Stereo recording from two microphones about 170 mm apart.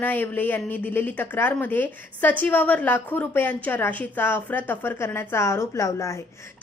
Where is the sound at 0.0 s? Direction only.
10° left (ahead or behind).